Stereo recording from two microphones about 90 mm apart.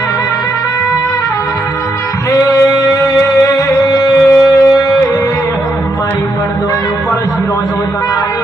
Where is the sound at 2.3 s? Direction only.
45° left (ahead or behind).